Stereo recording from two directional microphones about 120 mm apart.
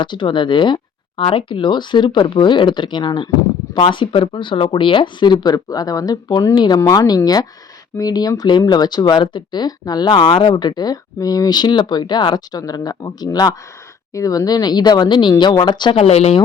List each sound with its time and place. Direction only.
0.0 s speech: 40° left (ahead or behind)
16.0 s speech: 60° left (ahead or behind)